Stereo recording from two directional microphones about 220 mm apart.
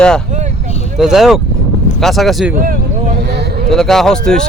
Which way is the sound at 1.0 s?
Centre (ahead or behind).